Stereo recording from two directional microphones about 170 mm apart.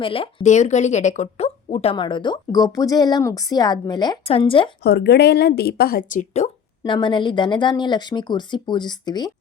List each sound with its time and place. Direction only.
0.0 s speech: 30° left (ahead or behind)
4.8 s speech: 75° left (ahead or behind); by 6.5 s 45° left (ahead or behind)
6.8 s speech: 25° left (ahead or behind)